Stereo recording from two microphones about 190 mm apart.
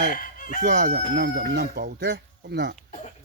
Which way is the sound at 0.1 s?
45° left (ahead or behind).